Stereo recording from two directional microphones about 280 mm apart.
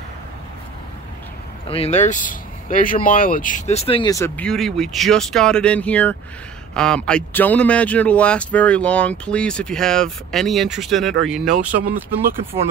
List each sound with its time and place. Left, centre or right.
1.7 s a man's voice: left; by 12.4 s centre